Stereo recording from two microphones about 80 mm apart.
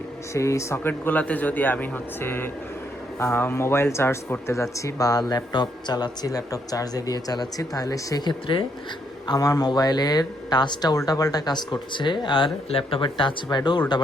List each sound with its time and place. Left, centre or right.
0.3 s speech: left
0.9 s speech: left
8.3 s speech: left
9.2 s speech: left